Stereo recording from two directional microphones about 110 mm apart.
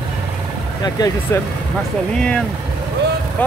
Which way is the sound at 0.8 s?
35° left (ahead or behind).